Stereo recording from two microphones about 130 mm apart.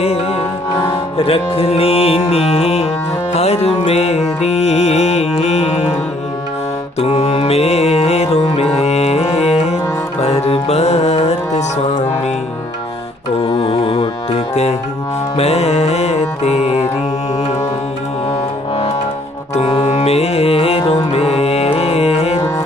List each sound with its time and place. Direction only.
0.0 s music: 50° left (ahead or behind)
7.0 s music: 55° left (ahead or behind)
13.4 s carnatic music: 40° left (ahead or behind)
15.4 s music: 55° left (ahead or behind)
19.8 s music: 55° left (ahead or behind)